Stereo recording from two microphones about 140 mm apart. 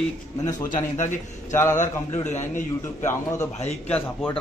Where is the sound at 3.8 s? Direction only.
10° left (ahead or behind).